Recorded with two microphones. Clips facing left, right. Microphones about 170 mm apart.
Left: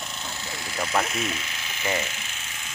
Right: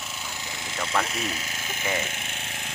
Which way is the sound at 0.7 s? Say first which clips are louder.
Left 2 dB; 10° left (ahead or behind).